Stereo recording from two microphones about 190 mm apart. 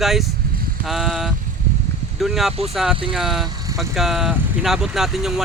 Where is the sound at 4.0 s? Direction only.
Centre (ahead or behind).